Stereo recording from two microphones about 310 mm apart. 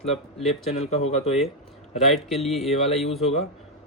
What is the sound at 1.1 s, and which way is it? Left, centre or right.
Speech, centre.